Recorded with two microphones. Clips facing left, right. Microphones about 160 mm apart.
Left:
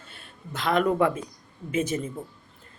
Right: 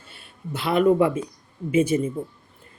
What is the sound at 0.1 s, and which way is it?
Speech, 10° right (ahead or behind).